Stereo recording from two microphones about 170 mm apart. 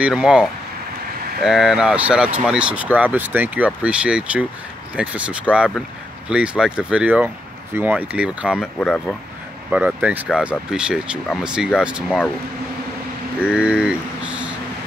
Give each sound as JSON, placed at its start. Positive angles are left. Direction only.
{"t": 0.0, "sound": "speech", "side_deg": -5}
{"t": 8.7, "sound": "speech", "side_deg": 5}
{"t": 9.7, "sound": "speech", "side_deg": -10}
{"t": 13.4, "sound": "speech", "side_deg": -5}